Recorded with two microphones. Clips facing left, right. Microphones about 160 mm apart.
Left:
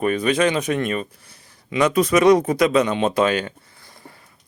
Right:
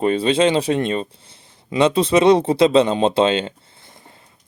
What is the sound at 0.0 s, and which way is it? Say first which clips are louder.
Speech: right 2 dB; 25° right (ahead or behind).